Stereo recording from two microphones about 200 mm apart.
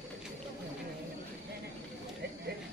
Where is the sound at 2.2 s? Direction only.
55° right (ahead or behind).